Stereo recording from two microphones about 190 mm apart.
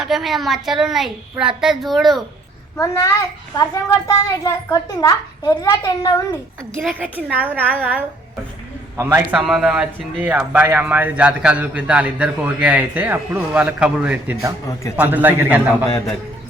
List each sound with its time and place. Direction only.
0.0 s a child's voice: centre (ahead or behind)
2.7 s a child's voice: 15° left (ahead or behind)
7.0 s speech: 10° right (ahead or behind)
9.0 s speech: 10° right (ahead or behind)